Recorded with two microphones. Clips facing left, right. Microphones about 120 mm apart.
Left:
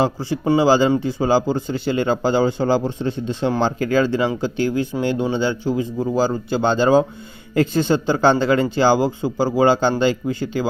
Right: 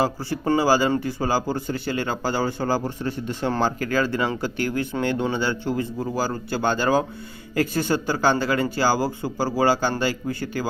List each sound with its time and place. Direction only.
0.0 s a man's voice: 20° left (ahead or behind)